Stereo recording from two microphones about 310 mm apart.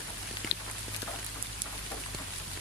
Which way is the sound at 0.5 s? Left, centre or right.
Left.